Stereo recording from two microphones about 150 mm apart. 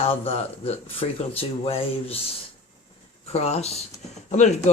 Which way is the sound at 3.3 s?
45° left (ahead or behind).